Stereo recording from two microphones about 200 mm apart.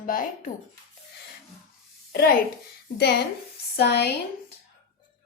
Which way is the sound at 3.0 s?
55° left (ahead or behind).